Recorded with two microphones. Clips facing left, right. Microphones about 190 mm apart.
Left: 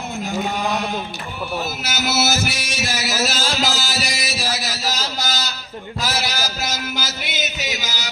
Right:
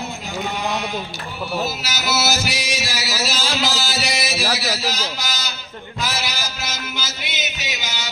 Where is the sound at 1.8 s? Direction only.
50° left (ahead or behind).